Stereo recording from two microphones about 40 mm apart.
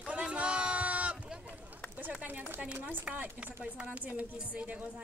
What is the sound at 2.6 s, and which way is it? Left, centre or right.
Speech, right.